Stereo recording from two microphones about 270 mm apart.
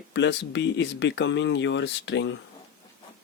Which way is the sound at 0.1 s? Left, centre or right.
Left.